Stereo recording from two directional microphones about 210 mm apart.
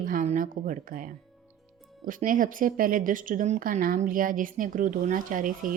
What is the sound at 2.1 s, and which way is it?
A woman's voice, 40° right (ahead or behind).